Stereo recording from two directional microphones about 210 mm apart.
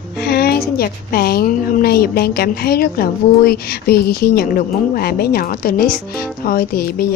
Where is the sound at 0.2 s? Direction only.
50° left (ahead or behind).